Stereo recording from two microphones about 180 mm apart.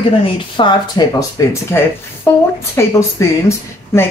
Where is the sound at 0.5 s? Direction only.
25° left (ahead or behind).